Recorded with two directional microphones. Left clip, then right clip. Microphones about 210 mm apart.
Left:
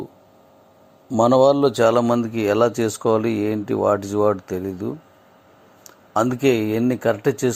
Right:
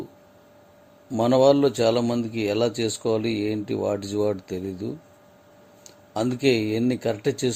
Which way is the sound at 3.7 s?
10° left (ahead or behind).